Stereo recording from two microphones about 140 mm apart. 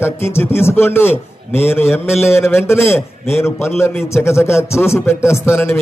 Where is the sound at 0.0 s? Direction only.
15° left (ahead or behind).